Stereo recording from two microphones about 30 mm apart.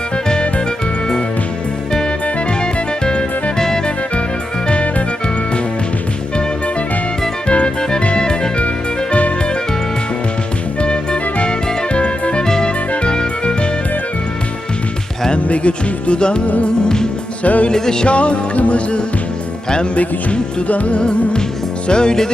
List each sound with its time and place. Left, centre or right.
2.2 s music: left
4.7 s music: left
7.4 s music: left
7.8 s music: left
10.8 s music: left
12.4 s music: left
15.4 s music: left
17.4 s music: left
17.7 s music: left
18.0 s music: left
20.7 s music: left
20.9 s music: left